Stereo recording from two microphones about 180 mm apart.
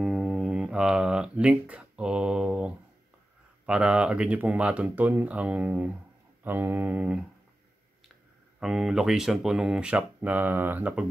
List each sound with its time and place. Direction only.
0.0 s music: centre (ahead or behind)
3.6 s speech: 5° right (ahead or behind)
8.5 s speech: centre (ahead or behind)